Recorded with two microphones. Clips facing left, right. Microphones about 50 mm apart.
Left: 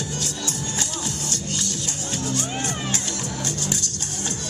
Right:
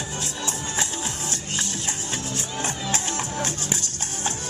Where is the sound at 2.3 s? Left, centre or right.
Left.